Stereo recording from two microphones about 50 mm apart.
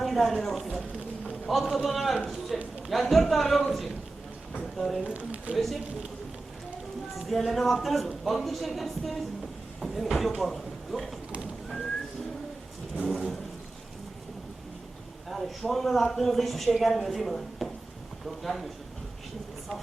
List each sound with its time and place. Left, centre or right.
0.0 s a man's voice: centre
5.0 s speech: right
5.5 s speech: centre
7.3 s speech: centre
13.1 s speech: centre
15.3 s speech: centre